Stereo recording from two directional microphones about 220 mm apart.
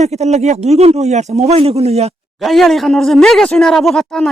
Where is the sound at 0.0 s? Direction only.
30° right (ahead or behind).